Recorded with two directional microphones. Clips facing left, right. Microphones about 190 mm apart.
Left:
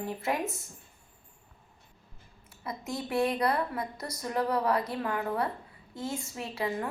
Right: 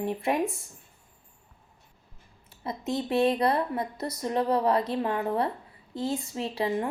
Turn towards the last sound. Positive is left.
turn(degrees=-25)  # may be behind; listen again after turning